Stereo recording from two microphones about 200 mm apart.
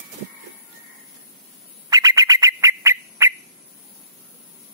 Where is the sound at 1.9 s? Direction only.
20° right (ahead or behind).